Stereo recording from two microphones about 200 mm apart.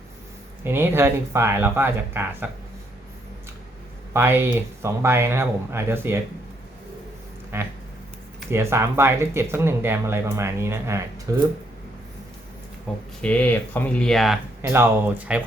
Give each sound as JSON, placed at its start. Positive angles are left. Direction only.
{"t": 0.6, "sound": "speech", "side_deg": -10}
{"t": 4.1, "sound": "speech", "side_deg": -10}
{"t": 7.5, "sound": "speech", "side_deg": -10}
{"t": 12.9, "sound": "speech", "side_deg": 0}
{"t": 14.6, "sound": "speech", "side_deg": -10}